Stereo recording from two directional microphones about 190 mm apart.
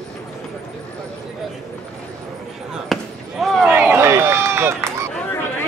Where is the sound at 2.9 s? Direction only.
Centre (ahead or behind).